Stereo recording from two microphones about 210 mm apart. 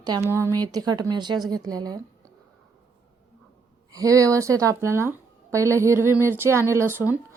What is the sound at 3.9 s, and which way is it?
A woman's voice, 15° right (ahead or behind).